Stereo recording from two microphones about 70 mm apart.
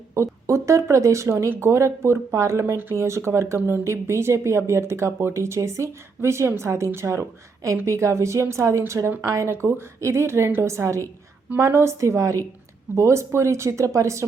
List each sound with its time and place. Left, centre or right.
0.1 s speech: right
9.5 s speech: right